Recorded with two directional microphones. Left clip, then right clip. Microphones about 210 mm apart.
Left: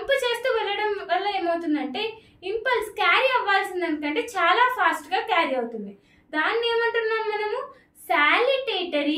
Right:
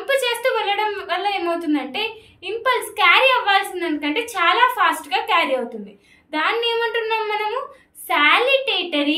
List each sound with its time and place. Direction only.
0.0 s a woman's voice: 15° left (ahead or behind)